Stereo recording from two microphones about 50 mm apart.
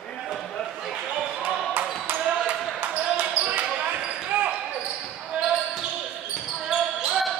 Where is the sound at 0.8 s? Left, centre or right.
Centre.